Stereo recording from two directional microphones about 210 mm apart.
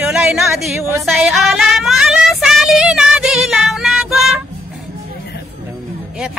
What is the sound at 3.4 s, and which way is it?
Child singing, centre (ahead or behind).